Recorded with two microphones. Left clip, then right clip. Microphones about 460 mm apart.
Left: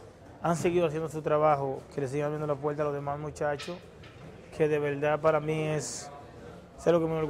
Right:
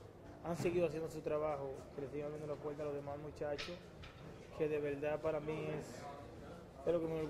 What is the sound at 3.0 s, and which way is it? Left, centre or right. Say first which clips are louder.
Speech: left 12 dB; left.